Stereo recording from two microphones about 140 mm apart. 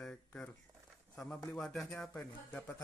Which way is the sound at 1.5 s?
Centre (ahead or behind).